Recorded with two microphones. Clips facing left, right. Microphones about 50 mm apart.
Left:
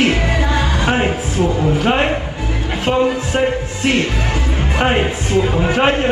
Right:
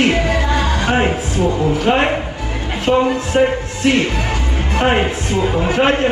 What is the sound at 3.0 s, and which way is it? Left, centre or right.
Speech, centre.